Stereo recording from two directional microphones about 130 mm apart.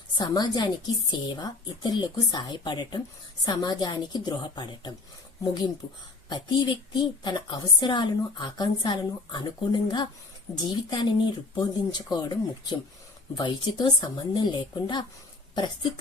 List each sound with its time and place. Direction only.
0.2 s a woman's voice: 30° left (ahead or behind)
6.2 s a woman's voice: 35° left (ahead or behind)